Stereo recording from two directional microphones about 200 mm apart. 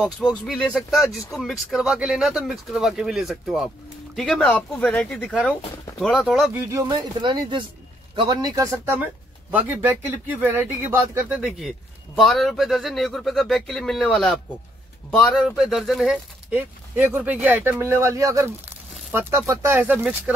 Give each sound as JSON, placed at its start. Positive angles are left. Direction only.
{"t": 0.3, "sound": "speech", "side_deg": 0}
{"t": 6.7, "sound": "speech", "side_deg": -20}